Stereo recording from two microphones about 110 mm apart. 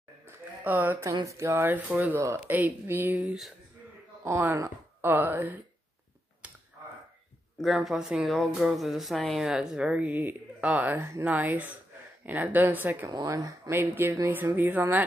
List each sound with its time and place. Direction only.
0.3 s a sound: 15° right (ahead or behind)
1.2 s speech: 25° right (ahead or behind)
7.6 s speech: 5° right (ahead or behind)
13.1 s speech: 35° right (ahead or behind); by 15.0 s 20° right (ahead or behind)